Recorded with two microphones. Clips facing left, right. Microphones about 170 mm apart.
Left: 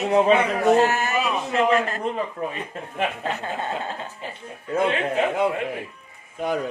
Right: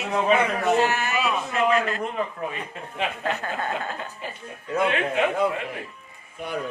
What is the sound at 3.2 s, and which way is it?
A woman's voice, 25° left (ahead or behind).